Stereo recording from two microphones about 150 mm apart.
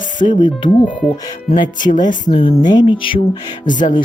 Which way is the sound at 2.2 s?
35° left (ahead or behind).